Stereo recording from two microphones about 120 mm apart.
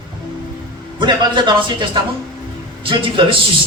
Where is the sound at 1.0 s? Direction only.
40° right (ahead or behind).